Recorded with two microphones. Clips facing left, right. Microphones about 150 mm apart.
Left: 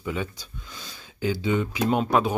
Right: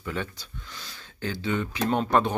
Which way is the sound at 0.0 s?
10° left (ahead or behind).